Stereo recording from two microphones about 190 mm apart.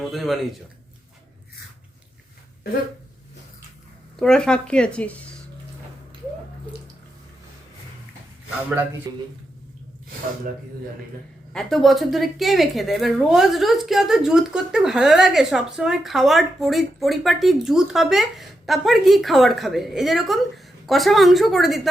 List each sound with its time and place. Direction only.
0.0 s a woman's voice: centre (ahead or behind)
4.2 s a woman's voice: 5° left (ahead or behind)
9.1 s speech: 20° right (ahead or behind)
11.5 s a woman's voice: centre (ahead or behind)